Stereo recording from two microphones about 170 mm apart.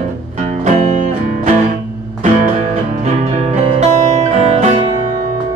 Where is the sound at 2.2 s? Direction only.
45° right (ahead or behind).